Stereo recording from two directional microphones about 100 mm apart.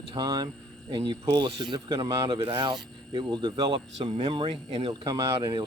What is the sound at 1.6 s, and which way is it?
Speech, 45° right (ahead or behind).